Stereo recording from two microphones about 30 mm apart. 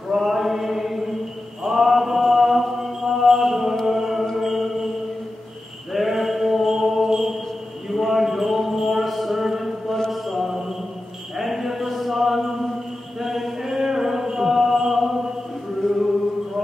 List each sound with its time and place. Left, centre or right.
0.1 s chant: centre
1.7 s mantra: centre
3.8 s music: centre
5.9 s a sound: centre
7.9 s a sound: centre
10.2 s mantra: centre
11.3 s a sound: centre
13.2 s chant: centre
15.8 s chant: left